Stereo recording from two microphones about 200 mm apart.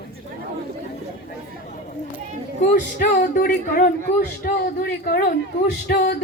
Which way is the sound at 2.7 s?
40° left (ahead or behind).